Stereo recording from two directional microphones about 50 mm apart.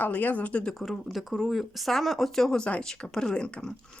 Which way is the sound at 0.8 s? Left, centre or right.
Centre.